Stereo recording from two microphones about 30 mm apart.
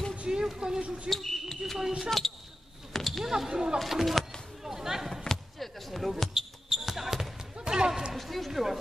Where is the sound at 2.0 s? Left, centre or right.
Centre.